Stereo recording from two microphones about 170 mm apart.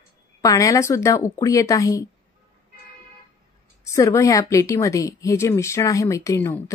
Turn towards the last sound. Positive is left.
turn(degrees=15)  # may be behind; listen again after turning